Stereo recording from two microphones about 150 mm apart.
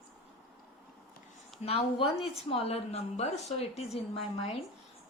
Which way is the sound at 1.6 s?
40° left (ahead or behind).